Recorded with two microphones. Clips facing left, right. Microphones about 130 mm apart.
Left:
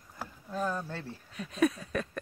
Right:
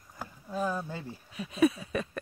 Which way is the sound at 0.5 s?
10° right (ahead or behind).